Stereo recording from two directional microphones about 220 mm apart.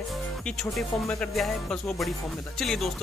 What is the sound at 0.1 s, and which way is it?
Speech, 5° left (ahead or behind).